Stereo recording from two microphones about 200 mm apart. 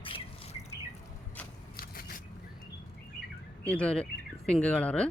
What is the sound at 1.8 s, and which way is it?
Biting, 45° left (ahead or behind).